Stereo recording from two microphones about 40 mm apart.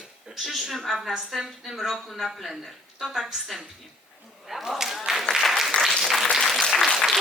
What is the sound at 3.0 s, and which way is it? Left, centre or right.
Speech, centre.